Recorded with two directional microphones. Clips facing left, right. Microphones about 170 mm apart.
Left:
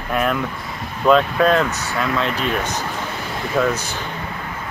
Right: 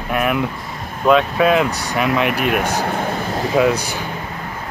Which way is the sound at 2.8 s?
55° right (ahead or behind).